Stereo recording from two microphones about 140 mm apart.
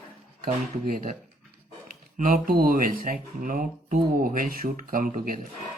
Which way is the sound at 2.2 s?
70° right (ahead or behind).